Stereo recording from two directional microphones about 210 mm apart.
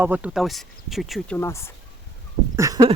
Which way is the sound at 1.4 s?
10° left (ahead or behind).